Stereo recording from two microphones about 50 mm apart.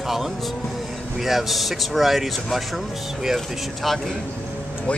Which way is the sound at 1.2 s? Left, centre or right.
Centre.